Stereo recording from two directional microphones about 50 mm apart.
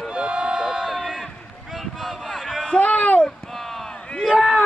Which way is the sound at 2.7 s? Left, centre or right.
Left.